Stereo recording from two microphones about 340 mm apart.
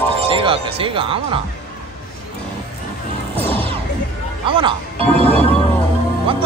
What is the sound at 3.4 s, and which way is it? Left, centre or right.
Smash, centre.